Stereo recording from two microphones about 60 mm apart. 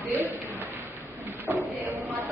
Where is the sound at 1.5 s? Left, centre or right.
Right.